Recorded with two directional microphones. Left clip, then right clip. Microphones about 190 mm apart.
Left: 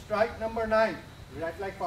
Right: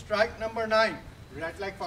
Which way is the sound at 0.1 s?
Centre (ahead or behind).